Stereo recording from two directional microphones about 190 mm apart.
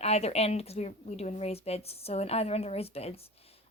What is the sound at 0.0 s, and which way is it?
A woman's voice, 35° left (ahead or behind).